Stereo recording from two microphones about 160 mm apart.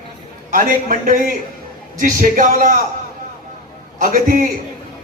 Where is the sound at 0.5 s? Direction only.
60° right (ahead or behind).